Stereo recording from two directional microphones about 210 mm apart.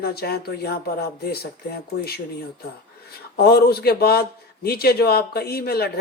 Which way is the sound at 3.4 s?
50° left (ahead or behind).